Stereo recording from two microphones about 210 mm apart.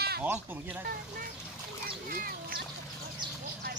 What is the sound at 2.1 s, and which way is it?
Duck, 45° right (ahead or behind).